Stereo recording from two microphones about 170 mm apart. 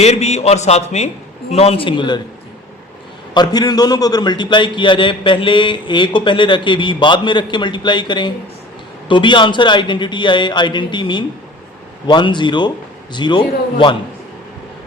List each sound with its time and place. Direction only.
0.0 s a man's voice: 40° left (ahead or behind)
3.3 s a man's voice: 25° left (ahead or behind)